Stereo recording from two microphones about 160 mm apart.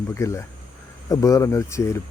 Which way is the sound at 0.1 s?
20° left (ahead or behind).